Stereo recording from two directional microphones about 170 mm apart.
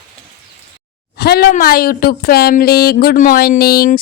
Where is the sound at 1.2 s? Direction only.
65° left (ahead or behind).